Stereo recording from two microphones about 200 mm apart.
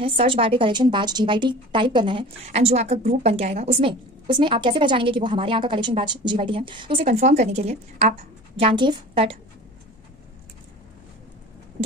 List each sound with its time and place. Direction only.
0.0 s a woman's voice: 25° right (ahead or behind)